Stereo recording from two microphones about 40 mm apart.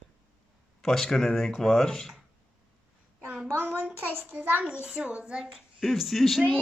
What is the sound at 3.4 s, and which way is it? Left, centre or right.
A child's voice, right.